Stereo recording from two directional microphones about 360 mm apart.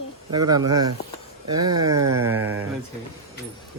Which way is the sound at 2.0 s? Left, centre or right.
Right.